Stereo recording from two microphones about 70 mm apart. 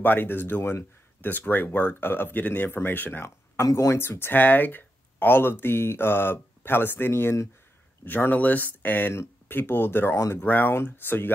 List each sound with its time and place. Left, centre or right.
0.0 s speech: left
3.7 s speech: left
10.1 s speech: left
10.4 s speech: left